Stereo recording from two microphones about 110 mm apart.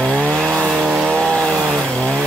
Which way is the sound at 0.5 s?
10° right (ahead or behind).